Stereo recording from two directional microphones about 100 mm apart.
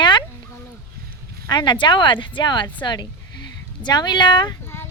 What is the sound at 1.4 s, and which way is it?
Speech, 50° left (ahead or behind).